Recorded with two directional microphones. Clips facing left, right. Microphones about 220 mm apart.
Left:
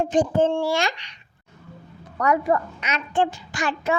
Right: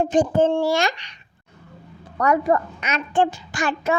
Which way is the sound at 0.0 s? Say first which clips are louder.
Right 2 dB; 45° right (ahead or behind).